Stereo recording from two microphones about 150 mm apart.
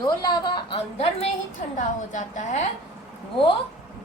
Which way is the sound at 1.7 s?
55° left (ahead or behind).